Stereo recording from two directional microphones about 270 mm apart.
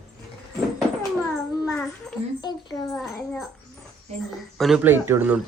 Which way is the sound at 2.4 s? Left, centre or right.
Centre.